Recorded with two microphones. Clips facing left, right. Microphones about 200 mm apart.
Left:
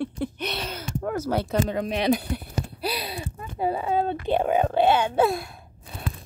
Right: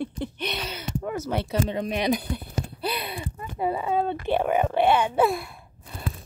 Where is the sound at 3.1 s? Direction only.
25° left (ahead or behind).